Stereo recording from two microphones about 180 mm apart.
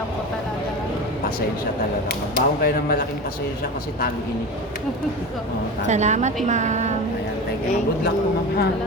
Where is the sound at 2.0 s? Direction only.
55° left (ahead or behind).